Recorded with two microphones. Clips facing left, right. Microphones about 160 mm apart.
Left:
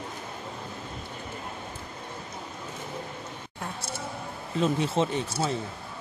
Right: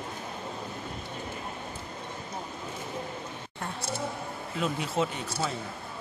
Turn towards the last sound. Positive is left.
turn(degrees=30)  # may be behind; listen again after turning